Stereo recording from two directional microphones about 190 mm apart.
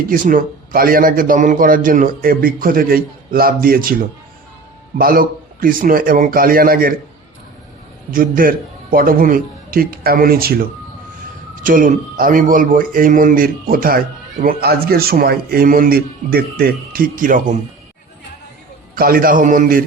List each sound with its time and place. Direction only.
0.1 s a man's voice: 45° right (ahead or behind)
8.1 s a man's voice: 50° right (ahead or behind)
18.9 s a man's voice: 50° right (ahead or behind)